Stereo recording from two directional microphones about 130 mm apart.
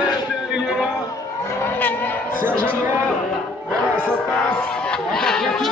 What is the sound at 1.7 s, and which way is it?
Vehicle, 15° left (ahead or behind).